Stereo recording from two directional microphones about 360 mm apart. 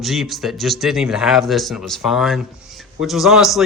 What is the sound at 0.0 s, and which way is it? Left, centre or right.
A man's voice, centre.